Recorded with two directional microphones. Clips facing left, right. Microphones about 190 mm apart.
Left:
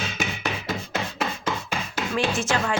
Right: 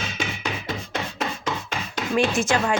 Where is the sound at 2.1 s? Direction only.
15° right (ahead or behind).